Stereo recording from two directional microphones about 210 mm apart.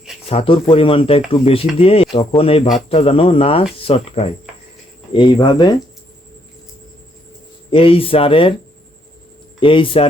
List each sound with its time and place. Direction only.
0.3 s speech: 25° left (ahead or behind)
7.7 s speech: 25° left (ahead or behind)
9.6 s speech: 25° left (ahead or behind)